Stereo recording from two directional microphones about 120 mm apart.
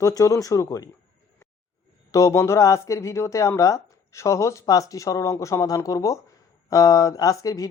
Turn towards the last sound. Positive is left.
turn(degrees=30)  # may be behind; listen again after turning